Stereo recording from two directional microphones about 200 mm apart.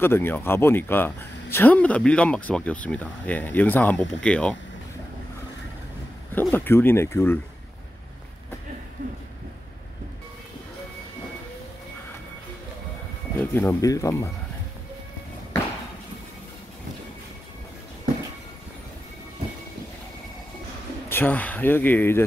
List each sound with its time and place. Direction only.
0.0 s speech: 10° left (ahead or behind)
6.3 s speech: 10° left (ahead or behind)
9.0 s a sound: 40° right (ahead or behind)
13.4 s speech: 10° left (ahead or behind)
21.1 s speech: 10° left (ahead or behind)